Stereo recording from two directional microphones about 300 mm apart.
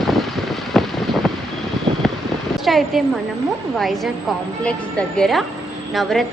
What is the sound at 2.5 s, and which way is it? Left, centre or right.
A woman's voice, centre.